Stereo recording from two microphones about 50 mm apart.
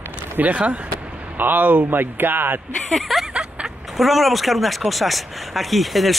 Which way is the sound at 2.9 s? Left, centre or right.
Centre.